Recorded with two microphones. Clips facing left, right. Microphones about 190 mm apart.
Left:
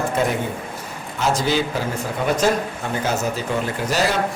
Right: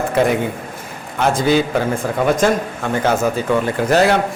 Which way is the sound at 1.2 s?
55° right (ahead or behind).